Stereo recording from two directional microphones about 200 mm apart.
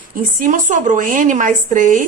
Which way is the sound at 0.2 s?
45° right (ahead or behind).